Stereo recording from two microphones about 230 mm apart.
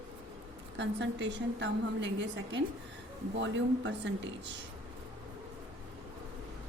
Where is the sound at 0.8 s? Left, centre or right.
Right.